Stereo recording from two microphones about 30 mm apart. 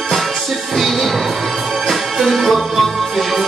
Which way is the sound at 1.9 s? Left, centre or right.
Centre.